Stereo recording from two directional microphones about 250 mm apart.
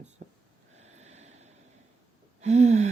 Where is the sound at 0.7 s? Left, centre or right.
Right.